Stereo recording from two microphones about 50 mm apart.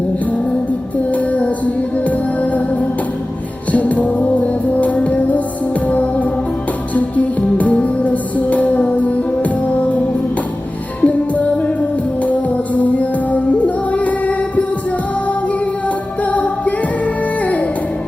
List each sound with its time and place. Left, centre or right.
1.1 s music: left
11.0 s music: left
12.7 s music: left
16.2 s music: left